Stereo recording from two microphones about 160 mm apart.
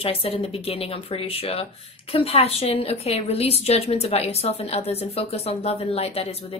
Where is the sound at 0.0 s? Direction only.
35° left (ahead or behind).